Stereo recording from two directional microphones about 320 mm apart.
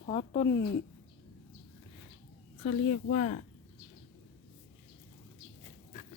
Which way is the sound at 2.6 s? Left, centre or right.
Left.